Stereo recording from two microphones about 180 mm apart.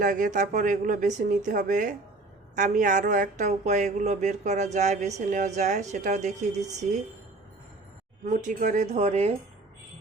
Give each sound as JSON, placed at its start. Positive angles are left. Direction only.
{"t": 0.0, "sound": "speech", "side_deg": -45}
{"t": 8.2, "sound": "speech", "side_deg": -45}